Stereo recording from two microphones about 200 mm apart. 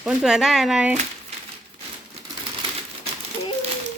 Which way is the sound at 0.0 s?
5° right (ahead or behind).